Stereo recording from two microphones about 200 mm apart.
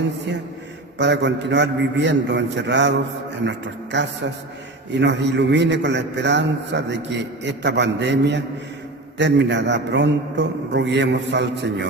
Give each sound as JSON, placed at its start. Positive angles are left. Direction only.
{"t": 0.9, "sound": "a man's voice", "side_deg": -60}
{"t": 3.9, "sound": "a man's voice", "side_deg": -60}